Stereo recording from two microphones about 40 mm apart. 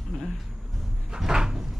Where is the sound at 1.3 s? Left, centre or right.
Centre.